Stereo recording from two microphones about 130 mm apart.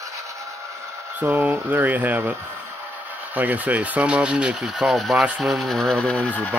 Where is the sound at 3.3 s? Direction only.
10° right (ahead or behind).